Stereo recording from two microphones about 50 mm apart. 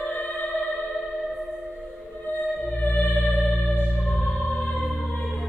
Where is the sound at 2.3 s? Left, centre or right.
Left.